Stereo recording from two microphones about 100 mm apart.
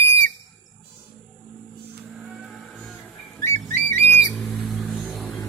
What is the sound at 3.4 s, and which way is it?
Whistle, 30° left (ahead or behind).